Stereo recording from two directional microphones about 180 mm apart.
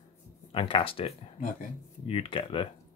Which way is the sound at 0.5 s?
30° left (ahead or behind).